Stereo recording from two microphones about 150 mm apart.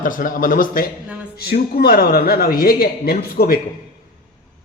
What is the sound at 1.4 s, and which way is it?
Speech, 90° left.